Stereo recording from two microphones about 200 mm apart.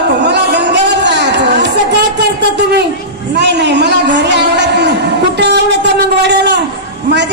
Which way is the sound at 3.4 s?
60° right (ahead or behind).